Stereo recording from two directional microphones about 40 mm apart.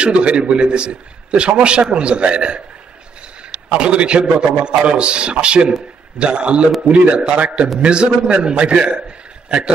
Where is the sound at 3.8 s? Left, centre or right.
Right.